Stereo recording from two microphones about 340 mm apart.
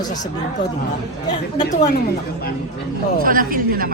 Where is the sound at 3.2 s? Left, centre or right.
Right.